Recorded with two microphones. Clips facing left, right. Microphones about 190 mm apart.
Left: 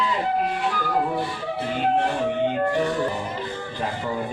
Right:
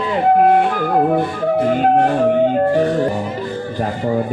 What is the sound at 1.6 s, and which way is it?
Speech, 50° right (ahead or behind).